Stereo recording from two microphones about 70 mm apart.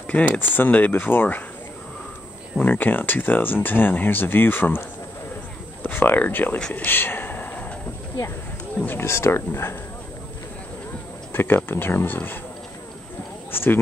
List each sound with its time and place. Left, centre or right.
0.0 s speech: left
2.6 s speech: left
6.7 s a sound: left
8.7 s speech: left
9.0 s speech: left
11.3 s speech: left
13.5 s speech: left